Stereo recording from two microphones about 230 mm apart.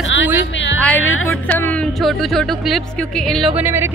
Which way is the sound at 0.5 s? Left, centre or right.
Left.